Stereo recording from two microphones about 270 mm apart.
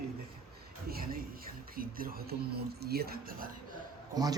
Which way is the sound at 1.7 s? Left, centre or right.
Right.